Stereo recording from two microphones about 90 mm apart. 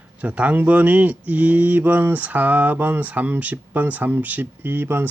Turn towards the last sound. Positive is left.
turn(degrees=-20)  # may be behind; listen again after turning